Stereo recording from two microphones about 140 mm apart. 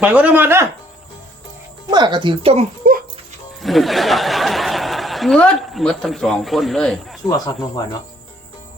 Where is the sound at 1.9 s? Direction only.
30° right (ahead or behind).